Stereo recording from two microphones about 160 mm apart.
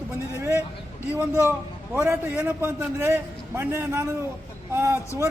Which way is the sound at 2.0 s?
15° right (ahead or behind).